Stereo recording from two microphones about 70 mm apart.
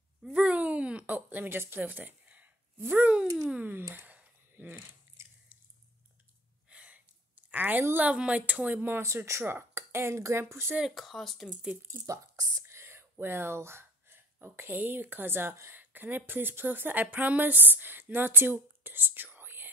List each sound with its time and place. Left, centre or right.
0.3 s a sound: centre
2.8 s speech: right
3.7 s a sound: right
6.7 s gasp: centre
8.1 s speech: centre
9.0 s speech: right
11.0 s speech: centre
12.1 s speech: right
12.6 s whispering: right
13.1 s speech: right
15.7 s speech: right